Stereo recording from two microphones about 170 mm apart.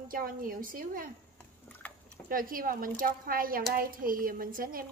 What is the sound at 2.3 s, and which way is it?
A woman's voice, 55° right (ahead or behind).